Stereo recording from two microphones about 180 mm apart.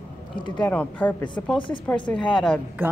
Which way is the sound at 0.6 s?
10° left (ahead or behind).